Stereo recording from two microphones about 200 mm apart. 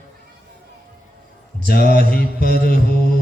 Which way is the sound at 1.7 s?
50° left (ahead or behind).